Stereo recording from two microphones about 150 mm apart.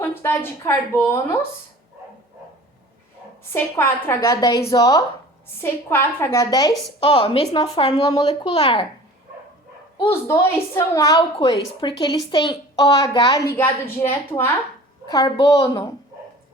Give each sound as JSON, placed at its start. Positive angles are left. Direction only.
{"t": 0.0, "sound": "a woman's voice", "side_deg": 15}
{"t": 3.5, "sound": "a woman's voice", "side_deg": 15}
{"t": 7.0, "sound": "a woman's voice", "side_deg": 35}
{"t": 10.0, "sound": "speech", "side_deg": 20}
{"t": 11.2, "sound": "speech", "side_deg": 35}
{"t": 13.6, "sound": "a woman's voice", "side_deg": 15}